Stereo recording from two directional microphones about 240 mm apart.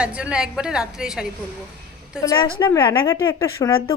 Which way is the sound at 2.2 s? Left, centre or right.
Centre.